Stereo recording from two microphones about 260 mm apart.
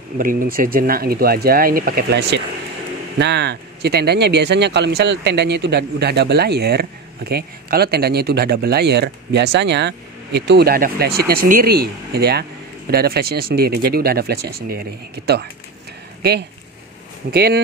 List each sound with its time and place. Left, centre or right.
0.2 s speech: right